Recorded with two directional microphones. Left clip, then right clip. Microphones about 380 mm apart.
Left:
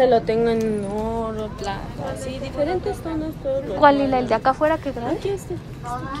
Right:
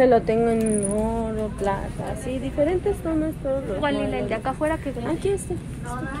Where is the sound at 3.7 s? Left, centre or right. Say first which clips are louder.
Left 9 dB; centre.